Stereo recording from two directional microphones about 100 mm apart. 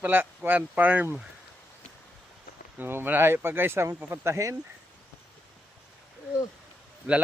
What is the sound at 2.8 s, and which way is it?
Speech, 20° right (ahead or behind).